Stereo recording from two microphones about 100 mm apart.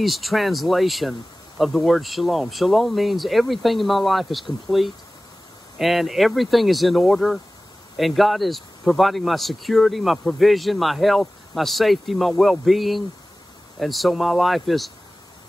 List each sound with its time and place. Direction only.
0.0 s speech: centre (ahead or behind)